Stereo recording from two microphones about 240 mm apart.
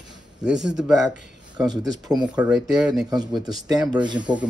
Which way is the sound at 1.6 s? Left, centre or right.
Centre.